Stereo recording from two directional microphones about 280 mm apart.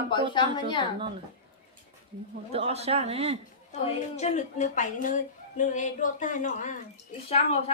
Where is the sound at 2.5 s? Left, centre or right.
Right.